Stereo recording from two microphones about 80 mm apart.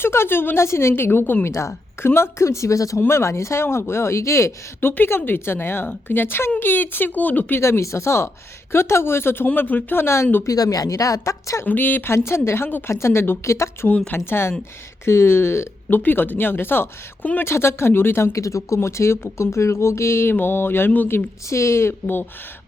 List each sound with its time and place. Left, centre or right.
0.0 s a woman's voice: left
7.6 s a woman's voice: left
10.4 s speech: left
11.6 s a woman's voice: left
21.5 s speech: left
22.0 s a woman's voice: left